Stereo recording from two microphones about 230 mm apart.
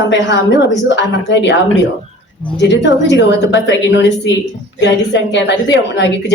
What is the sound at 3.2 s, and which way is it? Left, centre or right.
Speech, left.